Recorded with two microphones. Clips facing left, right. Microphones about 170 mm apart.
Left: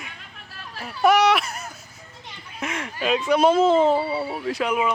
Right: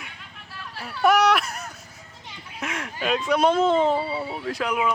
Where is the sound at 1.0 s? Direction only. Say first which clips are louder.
Left 1 dB; centre (ahead or behind).